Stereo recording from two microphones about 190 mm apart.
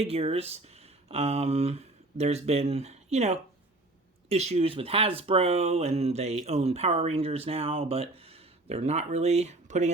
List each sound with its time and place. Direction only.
0.0 s speech: 30° right (ahead or behind)